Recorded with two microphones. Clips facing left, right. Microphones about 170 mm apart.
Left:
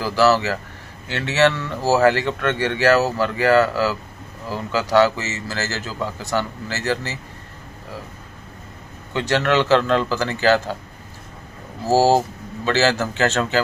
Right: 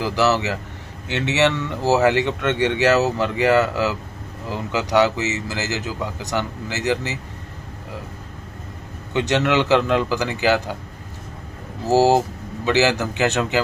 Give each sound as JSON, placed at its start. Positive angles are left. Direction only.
{"t": 0.0, "sound": "a man's voice", "side_deg": -20}
{"t": 9.1, "sound": "a man's voice", "side_deg": -20}
{"t": 11.9, "sound": "a man's voice", "side_deg": -20}